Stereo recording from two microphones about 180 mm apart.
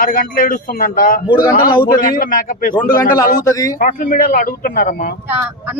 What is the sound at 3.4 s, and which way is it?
Speech, 20° left (ahead or behind).